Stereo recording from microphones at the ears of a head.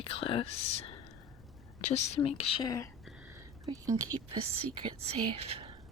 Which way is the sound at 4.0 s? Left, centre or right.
Right.